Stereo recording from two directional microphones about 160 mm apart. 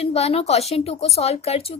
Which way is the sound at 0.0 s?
40° left (ahead or behind).